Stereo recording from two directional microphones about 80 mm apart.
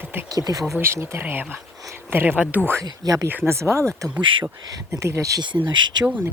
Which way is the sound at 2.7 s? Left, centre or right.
Right.